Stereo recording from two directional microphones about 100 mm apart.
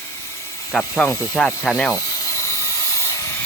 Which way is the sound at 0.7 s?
5° left (ahead or behind).